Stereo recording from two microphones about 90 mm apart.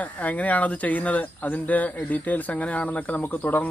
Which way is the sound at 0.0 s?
15° left (ahead or behind).